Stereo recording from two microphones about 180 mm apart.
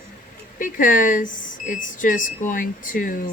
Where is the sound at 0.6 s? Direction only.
45° left (ahead or behind).